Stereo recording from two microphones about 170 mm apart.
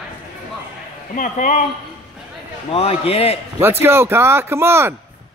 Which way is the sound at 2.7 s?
35° left (ahead or behind).